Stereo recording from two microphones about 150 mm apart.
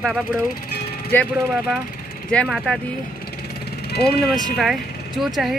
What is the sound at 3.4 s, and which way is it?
Jackhammer, 90° left.